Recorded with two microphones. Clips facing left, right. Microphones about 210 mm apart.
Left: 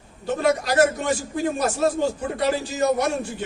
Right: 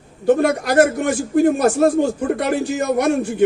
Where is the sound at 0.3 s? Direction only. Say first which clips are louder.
Right 6 dB; 55° right (ahead or behind).